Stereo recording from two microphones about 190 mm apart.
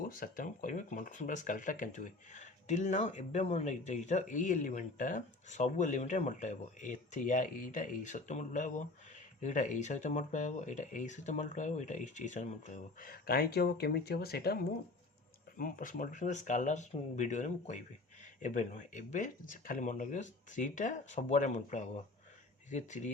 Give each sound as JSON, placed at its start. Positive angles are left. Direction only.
{"t": 0.0, "sound": "speech", "side_deg": 45}